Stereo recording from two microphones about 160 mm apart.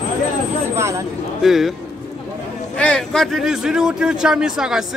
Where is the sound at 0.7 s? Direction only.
15° right (ahead or behind).